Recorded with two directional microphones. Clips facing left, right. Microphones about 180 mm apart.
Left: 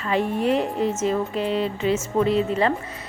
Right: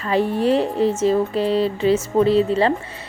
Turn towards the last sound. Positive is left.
turn(degrees=-30)  # may be behind; listen again after turning